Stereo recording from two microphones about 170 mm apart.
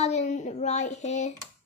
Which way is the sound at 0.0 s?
40° left (ahead or behind).